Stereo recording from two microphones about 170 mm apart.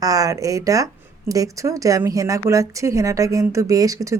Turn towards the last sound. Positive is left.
turn(degrees=-20)  # may be behind; listen again after turning